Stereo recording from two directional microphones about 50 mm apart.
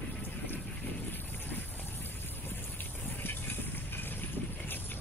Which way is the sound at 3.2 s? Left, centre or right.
Left.